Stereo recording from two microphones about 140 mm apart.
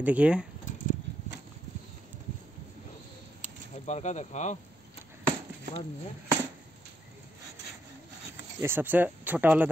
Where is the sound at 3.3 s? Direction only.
60° left (ahead or behind).